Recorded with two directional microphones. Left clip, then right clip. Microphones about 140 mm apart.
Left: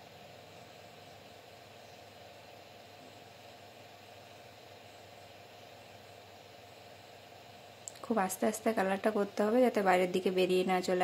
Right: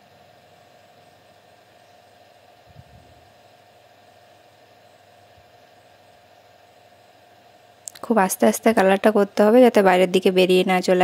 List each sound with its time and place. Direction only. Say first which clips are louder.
7.8 s speech: right 14 dB; 85° right